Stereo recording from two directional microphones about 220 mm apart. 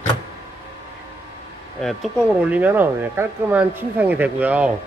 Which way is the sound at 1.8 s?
Centre (ahead or behind).